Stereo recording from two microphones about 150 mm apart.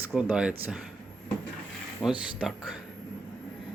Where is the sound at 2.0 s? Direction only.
25° left (ahead or behind).